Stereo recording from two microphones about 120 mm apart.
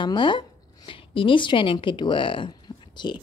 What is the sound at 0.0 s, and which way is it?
A woman's voice, 40° left (ahead or behind).